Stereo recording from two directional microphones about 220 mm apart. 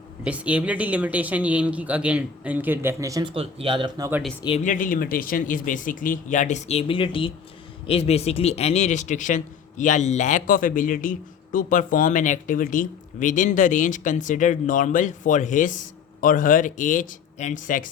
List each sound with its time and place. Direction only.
0.3 s speech: 5° right (ahead or behind)
4.4 s speech: 30° left (ahead or behind)